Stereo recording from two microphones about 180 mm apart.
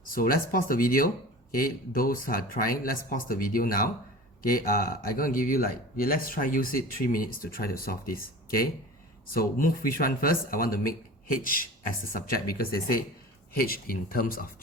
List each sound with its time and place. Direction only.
0.0 s speech: 50° left (ahead or behind)